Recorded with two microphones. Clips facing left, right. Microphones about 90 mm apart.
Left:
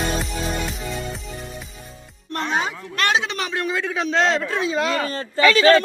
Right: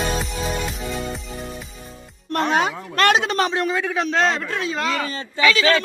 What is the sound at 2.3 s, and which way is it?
Music, 65° right (ahead or behind).